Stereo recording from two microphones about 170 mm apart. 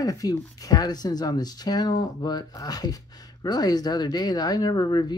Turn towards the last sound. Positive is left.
turn(degrees=25)  # may be behind; listen again after turning